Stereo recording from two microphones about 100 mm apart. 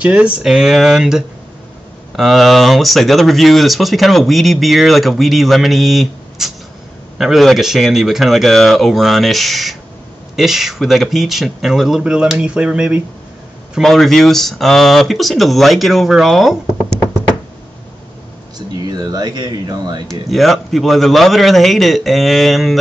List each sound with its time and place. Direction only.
0.0 s speech: 10° right (ahead or behind)
13.7 s speech: centre (ahead or behind)
18.9 s speech: 40° right (ahead or behind)
20.1 s speech: centre (ahead or behind)